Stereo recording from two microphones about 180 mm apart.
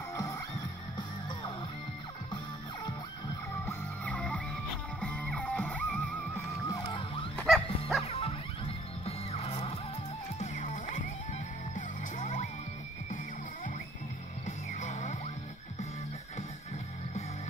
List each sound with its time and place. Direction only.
0.1 s music: 20° left (ahead or behind)
3.6 s music: 5° left (ahead or behind)
6.7 s music: 25° left (ahead or behind)
7.4 s music: centre (ahead or behind)
8.1 s music: 30° left (ahead or behind)
11.7 s music: 45° left (ahead or behind)
14.4 s music: 45° left (ahead or behind)